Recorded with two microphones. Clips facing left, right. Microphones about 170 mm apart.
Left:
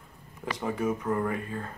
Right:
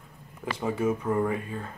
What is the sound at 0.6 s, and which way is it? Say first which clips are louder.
Speech: right 2 dB; 10° right (ahead or behind).